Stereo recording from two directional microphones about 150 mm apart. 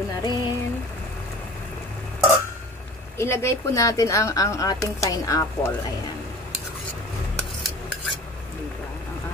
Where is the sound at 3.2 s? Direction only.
15° left (ahead or behind).